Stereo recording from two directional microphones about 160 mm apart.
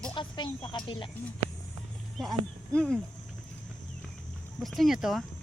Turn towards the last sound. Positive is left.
turn(degrees=0)  # may be behind; listen again after turning